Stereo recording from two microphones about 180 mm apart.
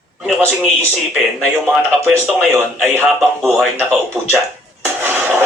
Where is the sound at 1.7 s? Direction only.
Centre (ahead or behind).